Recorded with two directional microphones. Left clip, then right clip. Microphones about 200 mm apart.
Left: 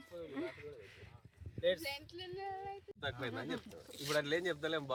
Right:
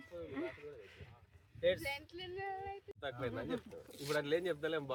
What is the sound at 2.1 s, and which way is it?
Speech, 10° right (ahead or behind).